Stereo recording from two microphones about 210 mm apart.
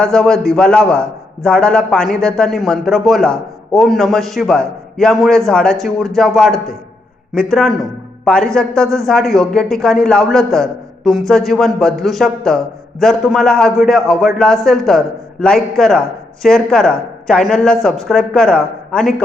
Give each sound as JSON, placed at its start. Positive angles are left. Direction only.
{"t": 0.0, "sound": "a man's voice", "side_deg": 5}
{"t": 8.2, "sound": "a man's voice", "side_deg": 5}